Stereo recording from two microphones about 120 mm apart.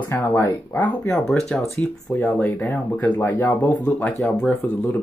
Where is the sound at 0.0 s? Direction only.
20° left (ahead or behind).